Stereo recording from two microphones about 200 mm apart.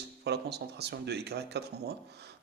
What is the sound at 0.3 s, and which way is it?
A man's voice, 55° right (ahead or behind).